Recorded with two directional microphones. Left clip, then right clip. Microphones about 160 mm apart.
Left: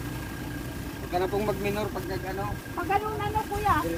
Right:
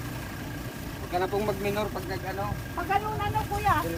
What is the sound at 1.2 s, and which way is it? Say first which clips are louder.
Speech: even; 20° left (ahead or behind).